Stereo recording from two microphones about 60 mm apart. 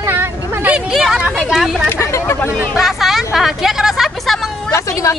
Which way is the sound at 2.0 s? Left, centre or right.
Left.